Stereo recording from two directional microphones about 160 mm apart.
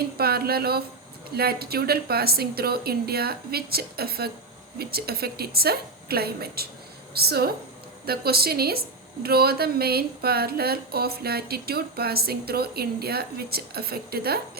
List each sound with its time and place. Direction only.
0.2 s a woman's voice: 75° right (ahead or behind)